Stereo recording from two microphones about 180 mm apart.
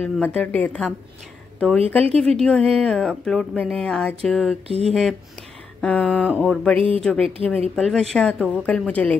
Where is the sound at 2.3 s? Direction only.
5° left (ahead or behind).